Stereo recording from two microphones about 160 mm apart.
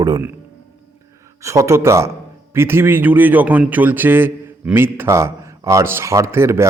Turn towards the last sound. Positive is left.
turn(degrees=-15)  # may be behind; listen again after turning